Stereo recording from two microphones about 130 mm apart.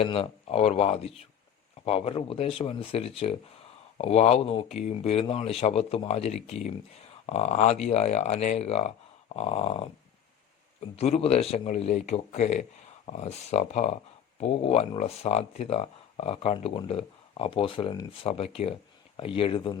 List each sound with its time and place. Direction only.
0.0 s speech: 45° left (ahead or behind)
10.9 s speech: 50° left (ahead or behind)